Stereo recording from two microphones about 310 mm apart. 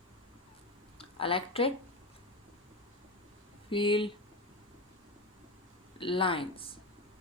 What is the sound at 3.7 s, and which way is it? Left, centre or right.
Speech, centre.